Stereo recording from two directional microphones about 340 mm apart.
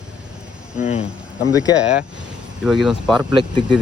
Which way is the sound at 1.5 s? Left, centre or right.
Centre.